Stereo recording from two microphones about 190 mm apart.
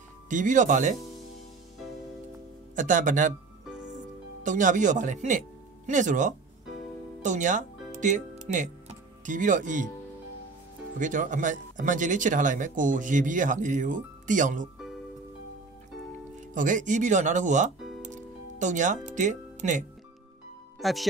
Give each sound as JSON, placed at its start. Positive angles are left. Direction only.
{"t": 0.3, "sound": "speech", "side_deg": -40}
{"t": 2.7, "sound": "speech", "side_deg": -40}
{"t": 4.4, "sound": "speech", "side_deg": -40}
{"t": 11.0, "sound": "speech", "side_deg": -40}
{"t": 16.3, "sound": "speech", "side_deg": -40}
{"t": 17.7, "sound": "music", "side_deg": 0}
{"t": 18.0, "sound": "music", "side_deg": -40}
{"t": 19.0, "sound": "speech", "side_deg": -40}
{"t": 20.8, "sound": "speech", "side_deg": 0}